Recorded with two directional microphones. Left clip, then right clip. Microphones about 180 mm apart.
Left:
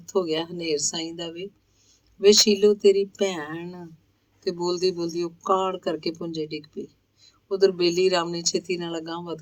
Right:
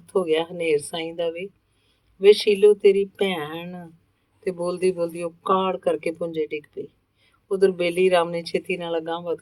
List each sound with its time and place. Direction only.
0.0 s speech: 35° left (ahead or behind)